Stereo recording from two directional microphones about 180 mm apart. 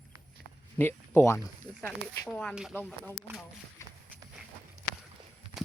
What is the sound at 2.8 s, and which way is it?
Speech, 10° left (ahead or behind).